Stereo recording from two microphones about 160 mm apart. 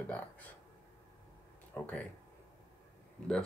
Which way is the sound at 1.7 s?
10° left (ahead or behind).